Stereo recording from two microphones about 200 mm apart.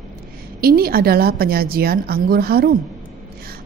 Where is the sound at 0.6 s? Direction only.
50° right (ahead or behind).